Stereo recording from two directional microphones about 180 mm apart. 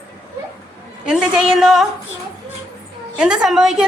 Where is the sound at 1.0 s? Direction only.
5° right (ahead or behind).